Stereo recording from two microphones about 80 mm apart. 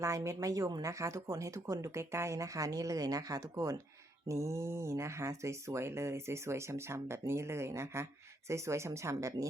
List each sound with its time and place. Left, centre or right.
0.0 s speech: right